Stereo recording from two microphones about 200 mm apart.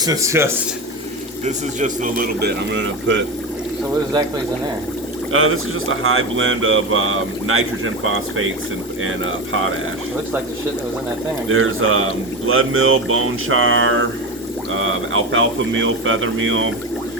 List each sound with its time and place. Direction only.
0.0 s speech: 15° right (ahead or behind)
1.5 s a man's voice: 40° right (ahead or behind); by 3.2 s 65° right (ahead or behind)
5.3 s speech: 90° right
11.4 s speech: 90° right